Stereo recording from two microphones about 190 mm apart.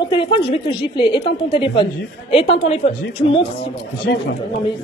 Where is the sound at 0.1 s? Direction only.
25° left (ahead or behind).